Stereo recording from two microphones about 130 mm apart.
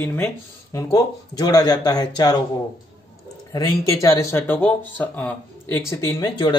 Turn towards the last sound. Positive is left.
turn(degrees=35)  # may be behind; listen again after turning